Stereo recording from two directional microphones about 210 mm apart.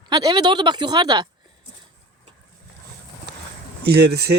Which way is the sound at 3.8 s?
50° right (ahead or behind).